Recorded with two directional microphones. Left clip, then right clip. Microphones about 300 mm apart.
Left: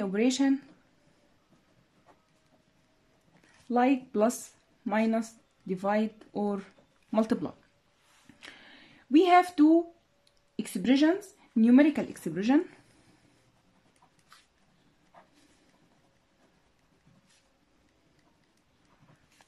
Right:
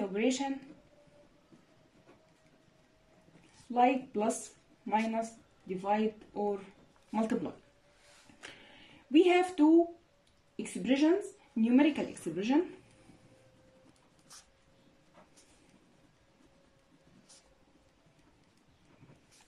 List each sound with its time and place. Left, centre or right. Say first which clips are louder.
0.1 s speech: left 8 dB; left
3.7 s speech: left 2 dB; left
8.5 s a sound: left 2 dB; left
10.5 s speech: left 5 dB; left